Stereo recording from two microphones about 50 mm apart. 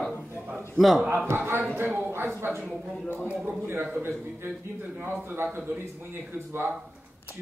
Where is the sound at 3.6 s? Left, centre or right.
Right.